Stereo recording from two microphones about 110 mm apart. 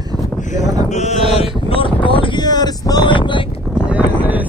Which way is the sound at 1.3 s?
60° left (ahead or behind).